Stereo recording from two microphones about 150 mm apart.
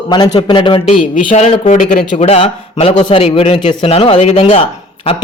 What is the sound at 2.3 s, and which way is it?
Speech, 45° left (ahead or behind).